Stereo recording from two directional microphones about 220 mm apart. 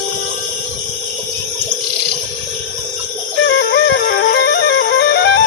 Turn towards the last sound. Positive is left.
turn(degrees=50)  # may be behind; listen again after turning